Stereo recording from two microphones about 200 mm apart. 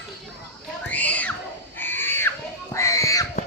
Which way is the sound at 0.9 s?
10° left (ahead or behind).